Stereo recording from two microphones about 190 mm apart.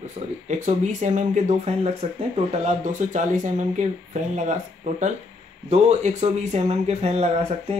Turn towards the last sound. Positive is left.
turn(degrees=-35)  # may be behind; listen again after turning